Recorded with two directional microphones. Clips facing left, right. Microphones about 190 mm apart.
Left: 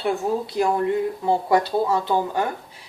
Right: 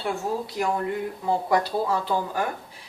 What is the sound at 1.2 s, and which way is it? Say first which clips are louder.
Speech: left 1 dB; 25° left (ahead or behind).